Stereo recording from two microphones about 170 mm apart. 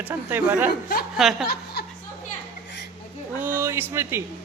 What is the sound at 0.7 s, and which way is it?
Speech, 60° left (ahead or behind).